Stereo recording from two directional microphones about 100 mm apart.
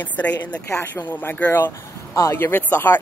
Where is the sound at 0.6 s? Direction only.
25° left (ahead or behind).